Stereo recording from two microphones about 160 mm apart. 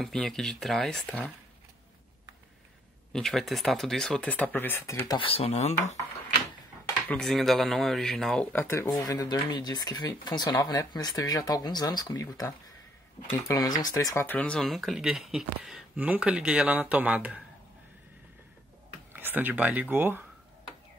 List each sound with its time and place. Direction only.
0.0 s speech: 5° left (ahead or behind)
3.1 s speech: 5° left (ahead or behind); by 5.8 s 45° left (ahead or behind)
7.1 s speech: 5° left (ahead or behind)
19.1 s speech: 10° right (ahead or behind)